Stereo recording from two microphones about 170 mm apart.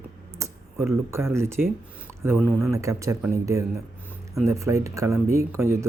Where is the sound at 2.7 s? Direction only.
20° right (ahead or behind).